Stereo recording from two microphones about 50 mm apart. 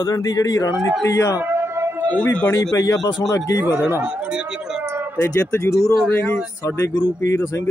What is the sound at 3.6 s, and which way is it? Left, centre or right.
Speech, right.